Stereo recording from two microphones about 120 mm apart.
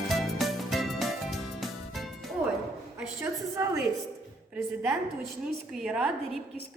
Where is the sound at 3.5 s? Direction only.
25° right (ahead or behind).